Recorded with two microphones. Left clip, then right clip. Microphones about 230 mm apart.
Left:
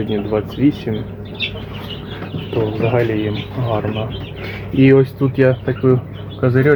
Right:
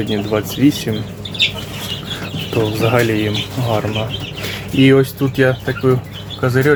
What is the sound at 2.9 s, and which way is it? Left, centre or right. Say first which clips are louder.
Speech: right 3 dB; right.